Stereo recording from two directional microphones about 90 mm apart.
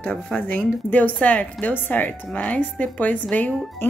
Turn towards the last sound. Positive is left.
turn(degrees=20)  # may be behind; listen again after turning